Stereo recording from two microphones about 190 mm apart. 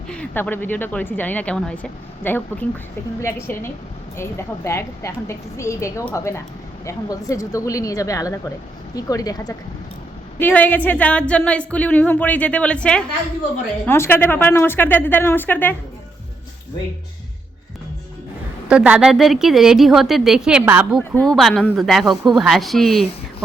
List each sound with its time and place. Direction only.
0.1 s a woman's voice: 5° left (ahead or behind)
18.7 s a woman's voice: 5° right (ahead or behind)